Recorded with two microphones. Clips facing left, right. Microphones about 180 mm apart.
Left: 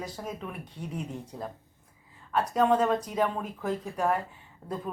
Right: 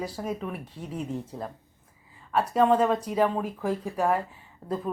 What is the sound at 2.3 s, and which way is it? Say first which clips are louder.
A woman's voice: right 2 dB; 10° right (ahead or behind).